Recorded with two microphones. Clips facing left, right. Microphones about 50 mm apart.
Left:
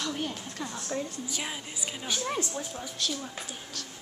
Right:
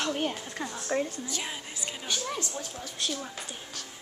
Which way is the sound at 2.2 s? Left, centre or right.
Centre.